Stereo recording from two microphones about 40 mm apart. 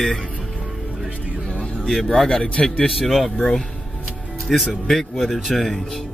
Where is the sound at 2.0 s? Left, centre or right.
Centre.